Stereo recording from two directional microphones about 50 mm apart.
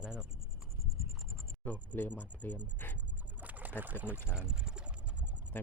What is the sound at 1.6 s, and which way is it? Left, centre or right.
Speech, left.